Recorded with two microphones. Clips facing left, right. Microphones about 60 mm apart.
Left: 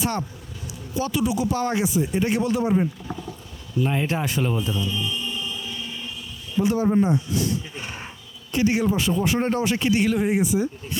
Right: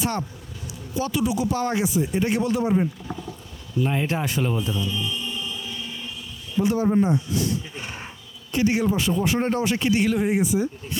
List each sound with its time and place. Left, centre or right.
0.9 s speech: centre
2.7 s speech: left
3.8 s a sound: left
6.8 s speech: left
8.5 s speech: centre